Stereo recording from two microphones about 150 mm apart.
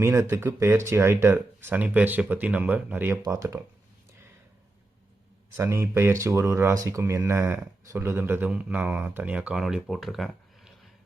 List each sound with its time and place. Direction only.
0.0 s speech: 15° right (ahead or behind)
5.5 s speech: 15° right (ahead or behind); by 10.7 s centre (ahead or behind)